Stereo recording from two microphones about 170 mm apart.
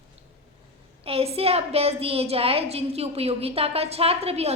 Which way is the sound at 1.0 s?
35° right (ahead or behind).